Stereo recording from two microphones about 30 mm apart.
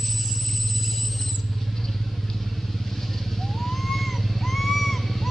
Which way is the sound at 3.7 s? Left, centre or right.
Centre.